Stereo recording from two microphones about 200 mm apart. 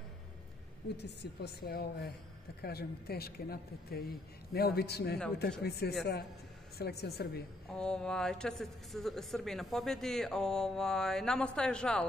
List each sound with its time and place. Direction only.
0.9 s a woman's voice: 60° left (ahead or behind)
7.7 s speech: 5° left (ahead or behind)